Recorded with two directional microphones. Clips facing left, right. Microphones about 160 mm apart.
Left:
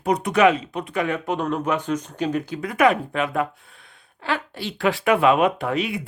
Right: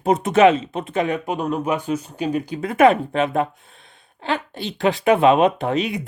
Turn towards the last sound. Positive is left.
turn(degrees=-20)  # may be behind; listen again after turning